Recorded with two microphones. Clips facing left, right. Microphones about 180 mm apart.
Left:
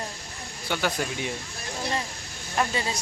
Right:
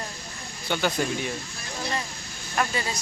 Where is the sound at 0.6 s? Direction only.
10° left (ahead or behind).